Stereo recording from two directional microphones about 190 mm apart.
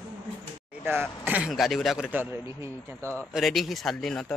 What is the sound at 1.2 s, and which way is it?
Speech, 5° right (ahead or behind).